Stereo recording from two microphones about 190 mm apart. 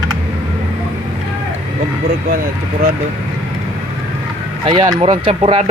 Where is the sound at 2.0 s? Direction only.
50° right (ahead or behind).